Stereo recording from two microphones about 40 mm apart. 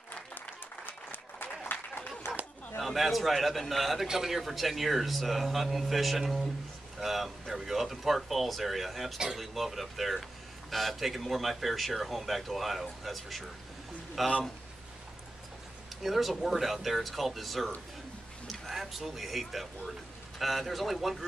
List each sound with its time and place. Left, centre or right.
0.8 s applause: left
2.8 s speech: centre
16.0 s speech: centre